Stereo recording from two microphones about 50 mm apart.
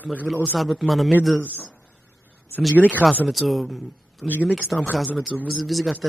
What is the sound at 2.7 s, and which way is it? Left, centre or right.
Speech, right.